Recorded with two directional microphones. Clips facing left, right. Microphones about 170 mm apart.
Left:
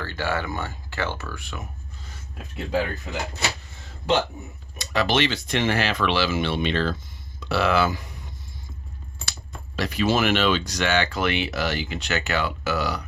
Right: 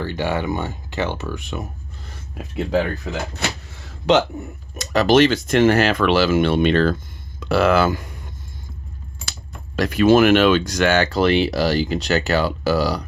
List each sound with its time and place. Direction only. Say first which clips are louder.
0.0 s speech: right 5 dB; 20° right (ahead or behind)
3.1 s speech: right 4 dB; 70° right (ahead or behind)
3.4 s a sound: right 2 dB; 60° right (ahead or behind)
4.1 s speech: right 6 dB; 80° right
4.8 s speech: right 8 dB; 45° right (ahead or behind)
9.7 s speech: right 9 dB; 50° right (ahead or behind); by 13.0 s 35° right (ahead or behind)